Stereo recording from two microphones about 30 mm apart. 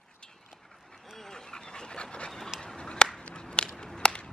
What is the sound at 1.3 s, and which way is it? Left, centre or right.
Dog, left.